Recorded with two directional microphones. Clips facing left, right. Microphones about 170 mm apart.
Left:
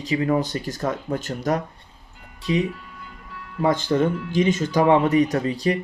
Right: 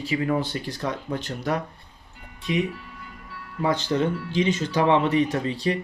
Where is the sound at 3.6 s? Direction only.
50° left (ahead or behind).